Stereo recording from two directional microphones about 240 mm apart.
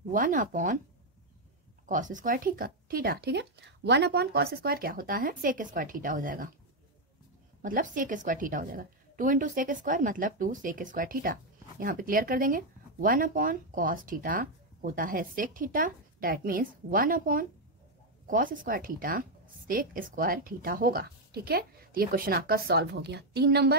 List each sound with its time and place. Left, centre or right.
0.1 s speech: right
1.9 s speech: right
7.6 s speech: right